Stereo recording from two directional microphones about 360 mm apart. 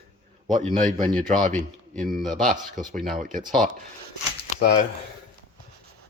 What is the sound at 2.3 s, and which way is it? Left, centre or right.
Speech, right.